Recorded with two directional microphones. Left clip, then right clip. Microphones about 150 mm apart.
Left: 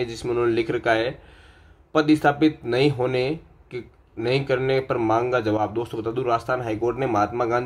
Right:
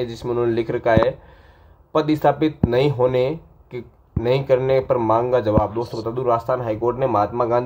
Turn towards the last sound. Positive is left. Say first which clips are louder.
# right 3 dB
turn(degrees=0)  # may be behind; listen again after turning